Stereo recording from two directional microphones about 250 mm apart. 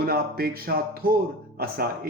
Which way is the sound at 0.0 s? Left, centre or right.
Right.